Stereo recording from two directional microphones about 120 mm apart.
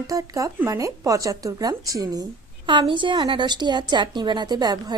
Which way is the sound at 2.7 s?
45° right (ahead or behind).